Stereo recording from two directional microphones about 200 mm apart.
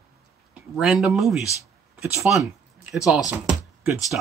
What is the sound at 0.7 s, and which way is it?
Speech, centre (ahead or behind).